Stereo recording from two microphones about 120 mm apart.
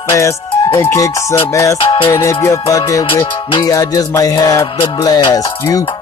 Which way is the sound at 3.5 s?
35° left (ahead or behind).